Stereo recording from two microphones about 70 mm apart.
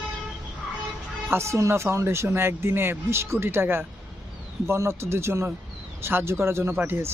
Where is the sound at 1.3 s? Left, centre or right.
Right.